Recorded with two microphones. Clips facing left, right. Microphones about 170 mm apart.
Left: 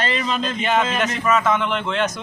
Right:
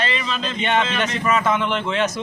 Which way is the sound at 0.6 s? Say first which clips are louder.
Right 1 dB; centre (ahead or behind).